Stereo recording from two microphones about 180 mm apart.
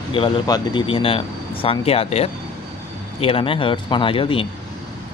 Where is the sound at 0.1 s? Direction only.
30° left (ahead or behind).